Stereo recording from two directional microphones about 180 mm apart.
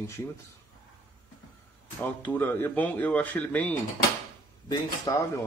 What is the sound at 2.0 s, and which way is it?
Speech, 10° left (ahead or behind).